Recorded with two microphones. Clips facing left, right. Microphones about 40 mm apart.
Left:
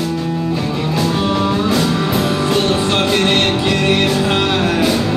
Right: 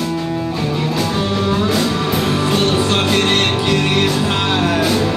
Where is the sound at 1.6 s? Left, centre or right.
Centre.